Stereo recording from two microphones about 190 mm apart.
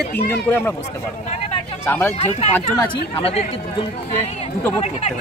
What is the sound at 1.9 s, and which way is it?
Speech, 10° left (ahead or behind).